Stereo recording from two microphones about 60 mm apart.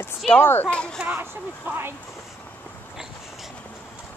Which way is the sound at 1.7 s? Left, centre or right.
Right.